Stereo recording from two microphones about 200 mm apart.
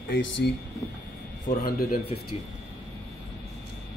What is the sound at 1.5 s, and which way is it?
Speech, 50° left (ahead or behind).